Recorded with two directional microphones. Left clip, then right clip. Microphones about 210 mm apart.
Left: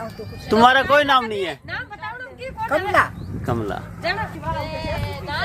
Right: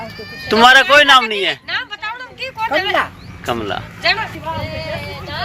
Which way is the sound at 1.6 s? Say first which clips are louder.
Right 8 dB; 50° left (ahead or behind).